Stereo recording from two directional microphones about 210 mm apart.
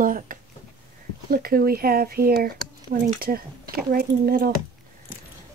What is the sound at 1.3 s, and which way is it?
Speech, 45° right (ahead or behind).